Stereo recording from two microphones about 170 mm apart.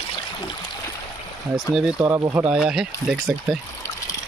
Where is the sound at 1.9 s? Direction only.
15° right (ahead or behind).